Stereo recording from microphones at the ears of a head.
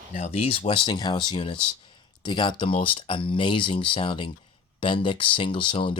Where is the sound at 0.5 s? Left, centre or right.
Left.